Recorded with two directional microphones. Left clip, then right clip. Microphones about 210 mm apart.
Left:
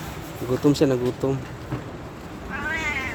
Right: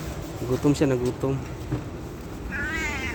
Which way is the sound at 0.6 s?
10° left (ahead or behind).